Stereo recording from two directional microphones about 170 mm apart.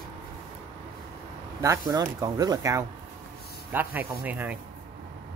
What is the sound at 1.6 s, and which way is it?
Speech, 20° right (ahead or behind).